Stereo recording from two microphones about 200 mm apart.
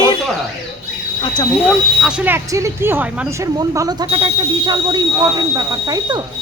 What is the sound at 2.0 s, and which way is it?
Speech, 5° right (ahead or behind).